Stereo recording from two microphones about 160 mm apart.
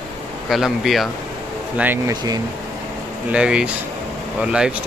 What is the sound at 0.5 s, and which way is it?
Speech, centre (ahead or behind).